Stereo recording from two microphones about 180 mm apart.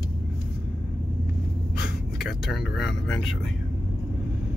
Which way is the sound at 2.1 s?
Centre (ahead or behind).